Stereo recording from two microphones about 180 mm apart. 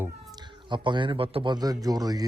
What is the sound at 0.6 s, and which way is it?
A man's voice, 25° right (ahead or behind).